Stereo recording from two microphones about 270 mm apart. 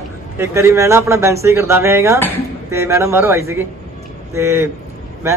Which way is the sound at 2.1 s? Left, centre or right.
Centre.